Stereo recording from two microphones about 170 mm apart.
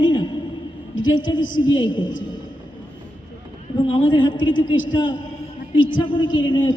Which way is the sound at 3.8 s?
30° left (ahead or behind).